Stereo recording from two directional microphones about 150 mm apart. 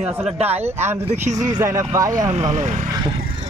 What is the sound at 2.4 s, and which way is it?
Speech, 50° right (ahead or behind).